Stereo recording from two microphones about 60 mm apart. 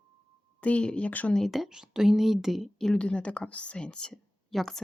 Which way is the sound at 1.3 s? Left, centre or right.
Centre.